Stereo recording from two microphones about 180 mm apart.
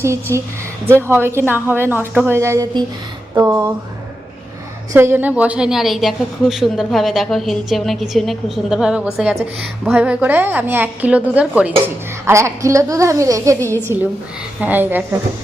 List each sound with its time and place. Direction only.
0.0 s a woman's voice: 15° right (ahead or behind)
4.9 s a woman's voice: 10° right (ahead or behind)